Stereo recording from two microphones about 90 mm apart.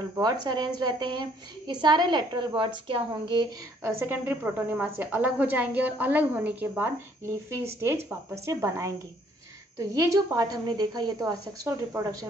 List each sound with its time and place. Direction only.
0.2 s a woman's voice: 50° right (ahead or behind)
3.8 s a woman's voice: 25° right (ahead or behind); by 12.3 s 40° right (ahead or behind)